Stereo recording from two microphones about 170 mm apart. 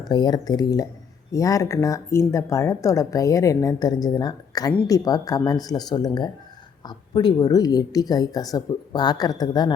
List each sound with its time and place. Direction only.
0.1 s speech: 25° left (ahead or behind)